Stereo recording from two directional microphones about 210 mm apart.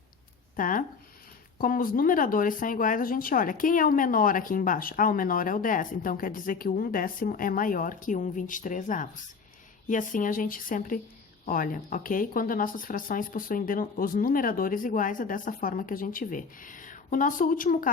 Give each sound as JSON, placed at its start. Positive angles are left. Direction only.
{"t": 0.5, "sound": "speech", "side_deg": 40}